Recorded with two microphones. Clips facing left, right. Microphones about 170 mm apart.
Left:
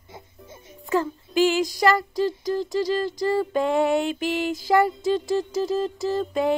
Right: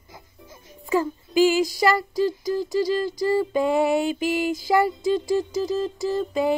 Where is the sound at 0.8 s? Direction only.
5° right (ahead or behind).